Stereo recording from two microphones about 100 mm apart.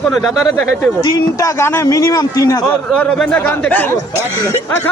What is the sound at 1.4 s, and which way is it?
Speech, 30° left (ahead or behind).